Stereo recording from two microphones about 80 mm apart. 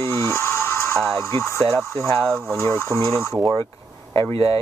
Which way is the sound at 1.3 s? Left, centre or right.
Left.